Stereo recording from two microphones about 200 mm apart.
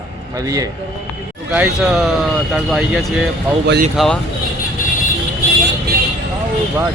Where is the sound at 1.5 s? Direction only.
5° right (ahead or behind).